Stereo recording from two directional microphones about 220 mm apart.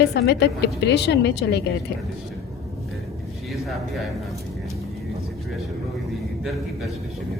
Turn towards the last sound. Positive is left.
turn(degrees=0)  # may be behind; listen again after turning